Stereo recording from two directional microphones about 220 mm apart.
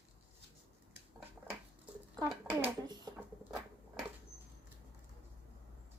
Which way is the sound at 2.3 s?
10° right (ahead or behind).